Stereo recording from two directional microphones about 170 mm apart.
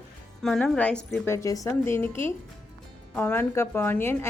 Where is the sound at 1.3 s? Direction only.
20° left (ahead or behind).